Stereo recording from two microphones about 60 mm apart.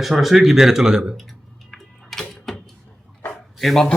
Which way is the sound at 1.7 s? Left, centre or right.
Centre.